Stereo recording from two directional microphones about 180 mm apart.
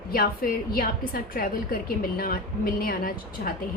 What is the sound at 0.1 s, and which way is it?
A woman's voice, 55° left (ahead or behind).